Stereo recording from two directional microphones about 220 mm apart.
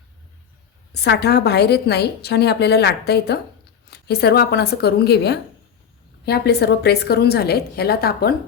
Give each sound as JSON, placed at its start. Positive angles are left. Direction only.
{"t": 0.9, "sound": "a woman's voice", "side_deg": 50}